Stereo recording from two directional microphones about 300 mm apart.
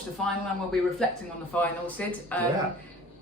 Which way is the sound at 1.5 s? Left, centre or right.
Centre.